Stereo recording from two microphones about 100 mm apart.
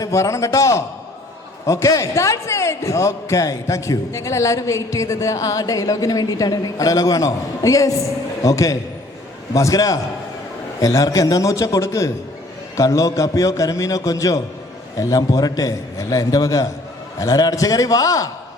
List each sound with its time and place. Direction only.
0.0 s a man's voice: 30° left (ahead or behind)